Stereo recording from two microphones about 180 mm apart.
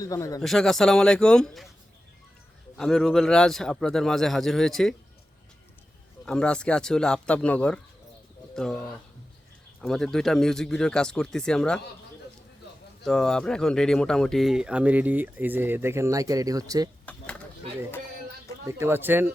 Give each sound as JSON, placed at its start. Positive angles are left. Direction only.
{"t": 0.0, "sound": "speech", "side_deg": 20}
{"t": 0.4, "sound": "speech", "side_deg": 0}
{"t": 2.7, "sound": "speech", "side_deg": 5}
{"t": 6.2, "sound": "speech", "side_deg": 5}
{"t": 9.8, "sound": "speech", "side_deg": 0}
{"t": 13.1, "sound": "speech", "side_deg": 5}
{"t": 18.7, "sound": "speech", "side_deg": -15}